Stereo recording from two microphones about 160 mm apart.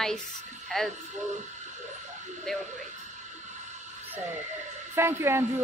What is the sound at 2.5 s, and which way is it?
Speech, centre (ahead or behind).